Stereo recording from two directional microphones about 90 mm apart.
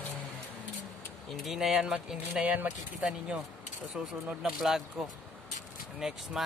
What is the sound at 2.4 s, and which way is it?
Speech, 20° right (ahead or behind).